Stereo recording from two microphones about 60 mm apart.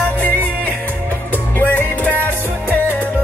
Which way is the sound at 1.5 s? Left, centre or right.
Left.